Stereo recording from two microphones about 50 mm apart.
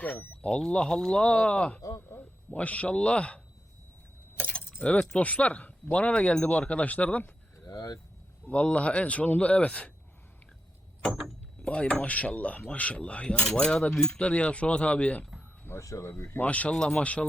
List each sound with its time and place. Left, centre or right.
0.4 s cutlery: left
1.1 s speech: left
1.9 s speech: left
2.5 s speech: left
4.4 s keys jangling: left
4.8 s speech: left
8.4 s speech: left
11.6 s speech: left
13.2 s cutlery: centre
14.2 s speech: left
15.8 s speech: left
16.4 s speech: left
16.7 s cutlery: centre
17.0 s speech: left